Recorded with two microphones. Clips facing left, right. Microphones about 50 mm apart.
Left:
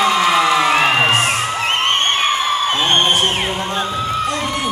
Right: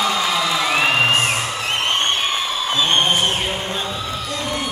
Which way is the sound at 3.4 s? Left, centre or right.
Left.